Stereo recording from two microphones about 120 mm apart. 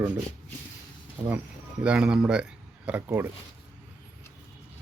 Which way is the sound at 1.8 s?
10° right (ahead or behind).